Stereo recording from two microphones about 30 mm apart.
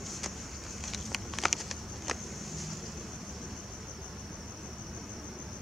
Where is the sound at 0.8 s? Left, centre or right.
Centre.